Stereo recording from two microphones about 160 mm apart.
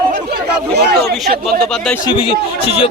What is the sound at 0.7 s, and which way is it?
Speech, 90° right.